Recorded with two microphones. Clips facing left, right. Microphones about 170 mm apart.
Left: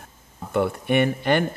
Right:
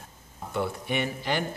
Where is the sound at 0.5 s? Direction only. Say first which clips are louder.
Left 8 dB; 60° left (ahead or behind).